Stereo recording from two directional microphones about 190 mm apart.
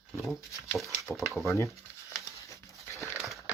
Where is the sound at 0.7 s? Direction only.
Centre (ahead or behind).